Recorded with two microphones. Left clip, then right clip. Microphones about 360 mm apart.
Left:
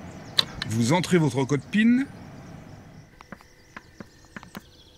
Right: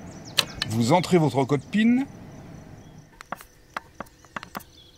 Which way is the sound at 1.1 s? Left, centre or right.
Right.